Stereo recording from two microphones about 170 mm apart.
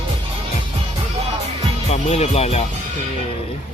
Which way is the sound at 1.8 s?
40° left (ahead or behind).